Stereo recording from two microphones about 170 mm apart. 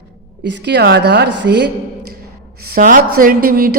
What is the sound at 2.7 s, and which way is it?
A woman's voice, 55° right (ahead or behind).